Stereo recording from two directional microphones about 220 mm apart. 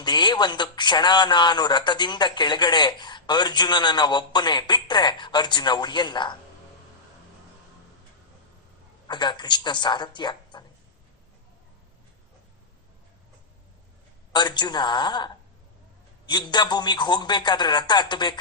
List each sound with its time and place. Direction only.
0.0 s a man's voice: 20° left (ahead or behind)
9.0 s a man's voice: 20° left (ahead or behind)
14.3 s a man's voice: 20° left (ahead or behind)